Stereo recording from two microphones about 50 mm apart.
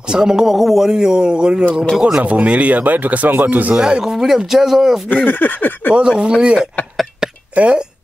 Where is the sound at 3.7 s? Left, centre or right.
Centre.